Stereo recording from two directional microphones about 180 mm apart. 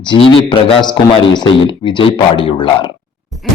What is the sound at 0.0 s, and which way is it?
Speech, 30° left (ahead or behind).